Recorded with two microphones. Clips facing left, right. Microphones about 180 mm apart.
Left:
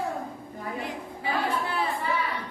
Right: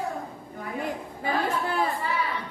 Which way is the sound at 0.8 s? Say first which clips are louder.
Right 3 dB; 45° right (ahead or behind).